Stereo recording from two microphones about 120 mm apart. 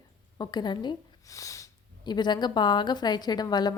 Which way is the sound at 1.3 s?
25° left (ahead or behind).